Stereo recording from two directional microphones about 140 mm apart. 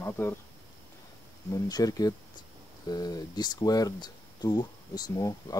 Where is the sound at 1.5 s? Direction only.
25° left (ahead or behind).